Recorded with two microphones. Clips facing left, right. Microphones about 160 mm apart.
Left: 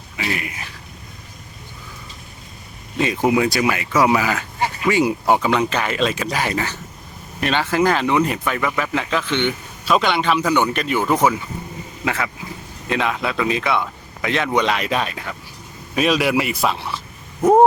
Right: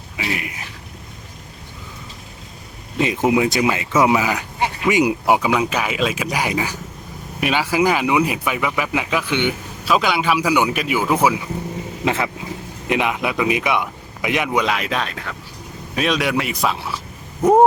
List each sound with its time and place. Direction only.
0.2 s speech: 15° right (ahead or behind)
3.0 s speech: 20° right (ahead or behind)
12.0 s speech: 25° right (ahead or behind); by 17.0 s centre (ahead or behind)